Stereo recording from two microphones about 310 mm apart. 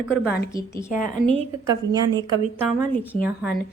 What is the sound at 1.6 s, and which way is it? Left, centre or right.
A woman's voice, centre.